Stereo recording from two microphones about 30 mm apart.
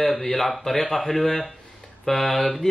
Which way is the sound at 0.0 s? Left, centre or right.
Centre.